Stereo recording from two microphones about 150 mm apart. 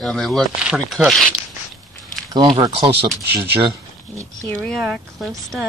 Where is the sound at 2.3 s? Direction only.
30° right (ahead or behind).